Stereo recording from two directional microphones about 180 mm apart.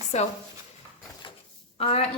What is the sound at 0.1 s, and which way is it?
Speech, 40° left (ahead or behind).